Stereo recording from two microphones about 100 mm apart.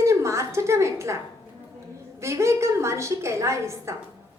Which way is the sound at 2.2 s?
30° right (ahead or behind).